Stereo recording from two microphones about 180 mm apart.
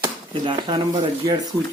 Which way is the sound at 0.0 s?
25° right (ahead or behind).